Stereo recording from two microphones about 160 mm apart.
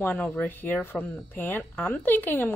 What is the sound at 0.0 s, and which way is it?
A woman's voice, 10° left (ahead or behind).